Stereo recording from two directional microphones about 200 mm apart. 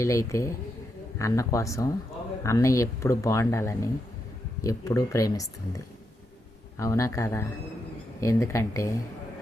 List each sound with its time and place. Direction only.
0.0 s speech: 15° left (ahead or behind)